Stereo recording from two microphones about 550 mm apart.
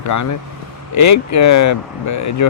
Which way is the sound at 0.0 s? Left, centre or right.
Left.